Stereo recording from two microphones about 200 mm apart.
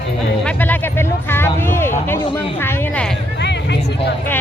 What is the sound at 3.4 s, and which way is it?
Vehicle, 60° left (ahead or behind).